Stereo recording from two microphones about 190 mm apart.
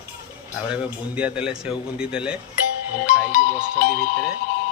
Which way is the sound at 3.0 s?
40° left (ahead or behind).